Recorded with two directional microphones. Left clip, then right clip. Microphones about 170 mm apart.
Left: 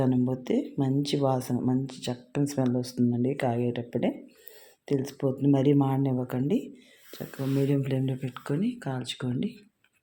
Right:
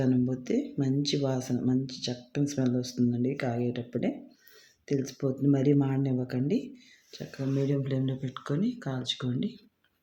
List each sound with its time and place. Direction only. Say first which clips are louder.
0.0 s speech: left 2 dB; 20° left (ahead or behind)
7.7 s speech: left 2 dB; 15° left (ahead or behind)